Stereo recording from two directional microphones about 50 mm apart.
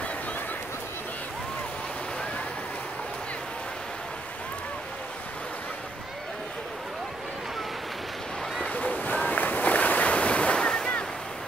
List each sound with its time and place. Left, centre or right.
8.6 s boat: left